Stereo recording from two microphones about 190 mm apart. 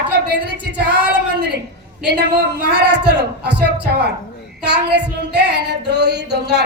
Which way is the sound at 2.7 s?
60° right (ahead or behind).